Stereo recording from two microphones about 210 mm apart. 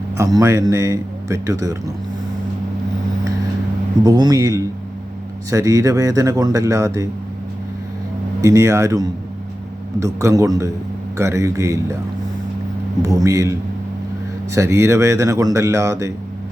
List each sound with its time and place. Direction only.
0.2 s speech: 15° right (ahead or behind)
4.0 s speech: 20° right (ahead or behind)
8.4 s speech: 15° right (ahead or behind)
13.0 s speech: 15° right (ahead or behind)